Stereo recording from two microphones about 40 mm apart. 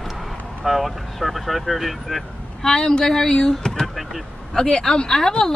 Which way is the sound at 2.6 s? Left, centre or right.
Centre.